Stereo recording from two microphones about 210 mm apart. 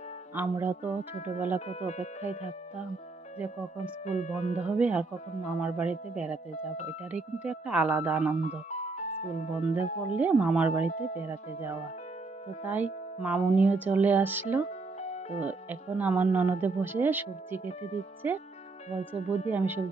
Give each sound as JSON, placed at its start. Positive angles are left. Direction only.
{"t": 0.4, "sound": "speech", "side_deg": -10}
{"t": 1.7, "sound": "speech", "side_deg": 30}
{"t": 4.0, "sound": "speech", "side_deg": 35}
{"t": 4.6, "sound": "speech", "side_deg": -5}
{"t": 8.4, "sound": "speech", "side_deg": 35}
{"t": 10.1, "sound": "speech", "side_deg": -5}
{"t": 15.0, "sound": "music", "side_deg": 30}
{"t": 15.4, "sound": "speech", "side_deg": -10}
{"t": 17.6, "sound": "speech", "side_deg": 30}
{"t": 18.2, "sound": "speech", "side_deg": -10}
{"t": 18.9, "sound": "speech", "side_deg": 30}
{"t": 19.5, "sound": "speech", "side_deg": -10}